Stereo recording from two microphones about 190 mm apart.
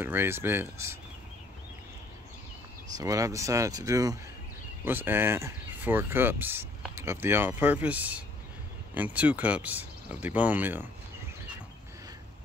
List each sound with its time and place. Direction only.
0.0 s speech: 10° right (ahead or behind)
3.0 s speech: 15° right (ahead or behind)